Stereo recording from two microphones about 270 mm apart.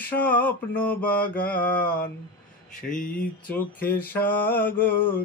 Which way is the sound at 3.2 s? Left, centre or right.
Centre.